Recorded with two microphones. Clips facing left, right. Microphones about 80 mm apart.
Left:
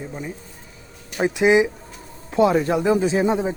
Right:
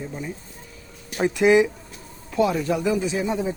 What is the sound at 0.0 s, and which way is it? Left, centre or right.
Speech, centre.